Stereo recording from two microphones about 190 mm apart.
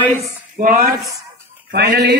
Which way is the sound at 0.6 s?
45° right (ahead or behind).